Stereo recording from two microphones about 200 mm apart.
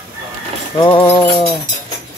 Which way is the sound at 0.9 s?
25° left (ahead or behind).